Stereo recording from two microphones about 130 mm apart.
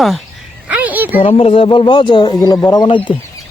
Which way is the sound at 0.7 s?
10° right (ahead or behind).